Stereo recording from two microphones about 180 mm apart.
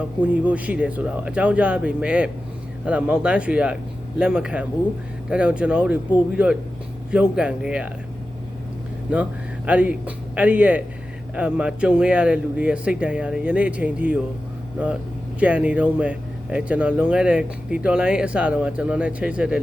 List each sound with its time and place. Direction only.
0.2 s speech: 5° right (ahead or behind)
9.1 s speech: 5° right (ahead or behind)
15.4 s speech: 10° right (ahead or behind)